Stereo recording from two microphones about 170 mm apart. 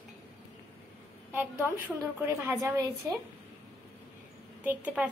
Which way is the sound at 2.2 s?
15° right (ahead or behind).